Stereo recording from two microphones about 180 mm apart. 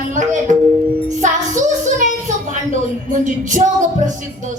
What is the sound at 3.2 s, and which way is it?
A woman's voice, 45° right (ahead or behind).